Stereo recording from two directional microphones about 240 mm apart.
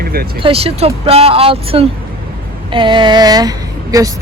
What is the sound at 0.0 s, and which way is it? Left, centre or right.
Vehicle, right.